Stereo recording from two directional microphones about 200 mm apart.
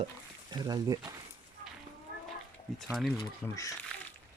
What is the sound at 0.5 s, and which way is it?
Speech, 20° right (ahead or behind).